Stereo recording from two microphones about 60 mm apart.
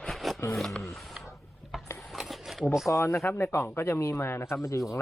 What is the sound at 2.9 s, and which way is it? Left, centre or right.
Speech, left.